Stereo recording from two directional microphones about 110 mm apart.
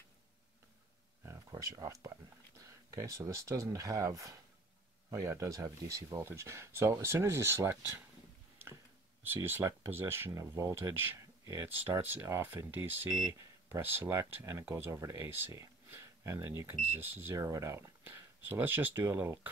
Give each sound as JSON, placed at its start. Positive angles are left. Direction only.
{"t": 1.5, "sound": "speech", "side_deg": -35}
{"t": 9.2, "sound": "speech", "side_deg": -20}
{"t": 13.2, "sound": "speech", "side_deg": -40}
{"t": 13.7, "sound": "speech", "side_deg": -20}